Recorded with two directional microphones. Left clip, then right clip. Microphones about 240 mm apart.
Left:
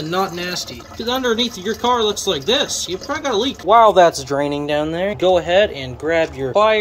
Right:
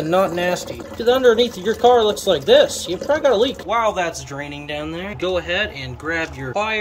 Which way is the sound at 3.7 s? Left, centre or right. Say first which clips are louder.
Left 9 dB; left.